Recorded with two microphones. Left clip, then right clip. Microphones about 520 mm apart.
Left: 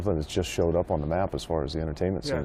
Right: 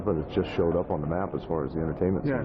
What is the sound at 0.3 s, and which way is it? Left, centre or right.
Speech, left.